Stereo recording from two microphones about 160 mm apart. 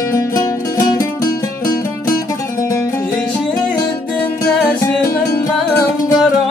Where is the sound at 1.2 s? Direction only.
60° left (ahead or behind).